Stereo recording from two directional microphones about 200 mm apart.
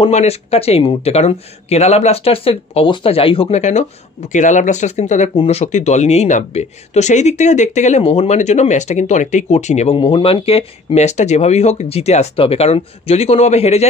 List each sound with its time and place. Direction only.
0.0 s speech: 30° left (ahead or behind)